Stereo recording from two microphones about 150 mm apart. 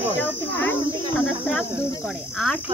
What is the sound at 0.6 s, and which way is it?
Speech, 15° left (ahead or behind).